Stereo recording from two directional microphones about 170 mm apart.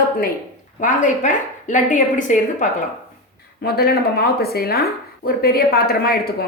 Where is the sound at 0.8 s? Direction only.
45° left (ahead or behind).